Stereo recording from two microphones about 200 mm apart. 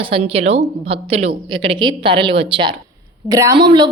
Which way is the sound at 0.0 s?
30° right (ahead or behind).